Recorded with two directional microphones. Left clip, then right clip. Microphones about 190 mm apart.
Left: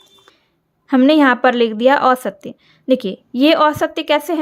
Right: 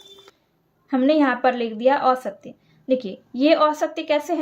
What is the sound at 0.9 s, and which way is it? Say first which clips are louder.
A woman's voice: left 7 dB; 50° left (ahead or behind).